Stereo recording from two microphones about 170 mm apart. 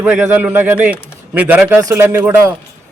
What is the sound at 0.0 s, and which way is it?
A man's voice, 10° right (ahead or behind).